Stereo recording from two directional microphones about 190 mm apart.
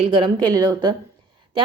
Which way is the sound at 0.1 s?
25° right (ahead or behind).